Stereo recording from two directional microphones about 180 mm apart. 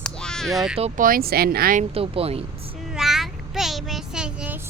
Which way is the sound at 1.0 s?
55° right (ahead or behind).